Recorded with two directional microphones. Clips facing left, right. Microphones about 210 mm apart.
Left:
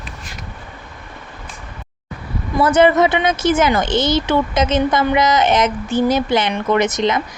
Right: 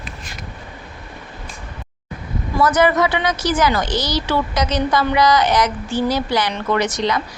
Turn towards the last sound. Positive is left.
turn(degrees=20)  # may be behind; listen again after turning